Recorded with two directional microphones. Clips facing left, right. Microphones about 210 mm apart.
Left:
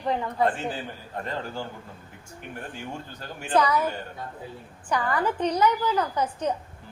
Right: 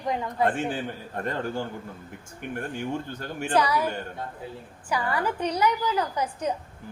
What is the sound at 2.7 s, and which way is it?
Speech, 55° right (ahead or behind).